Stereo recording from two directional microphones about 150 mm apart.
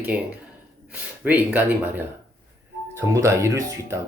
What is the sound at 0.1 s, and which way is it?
Speech, 10° right (ahead or behind).